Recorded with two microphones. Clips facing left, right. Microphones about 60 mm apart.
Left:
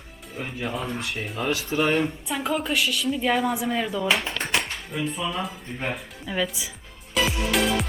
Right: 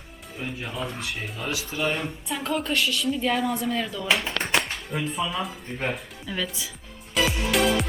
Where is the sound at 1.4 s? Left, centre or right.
Left.